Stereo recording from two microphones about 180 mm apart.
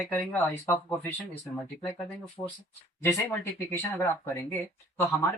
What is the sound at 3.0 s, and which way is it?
Speech, 15° left (ahead or behind).